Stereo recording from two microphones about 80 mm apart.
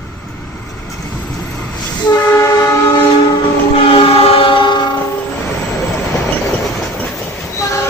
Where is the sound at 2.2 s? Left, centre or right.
Left.